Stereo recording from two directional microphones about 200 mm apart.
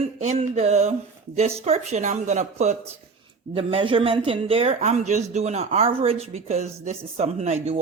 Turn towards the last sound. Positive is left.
turn(degrees=-35)  # may be behind; listen again after turning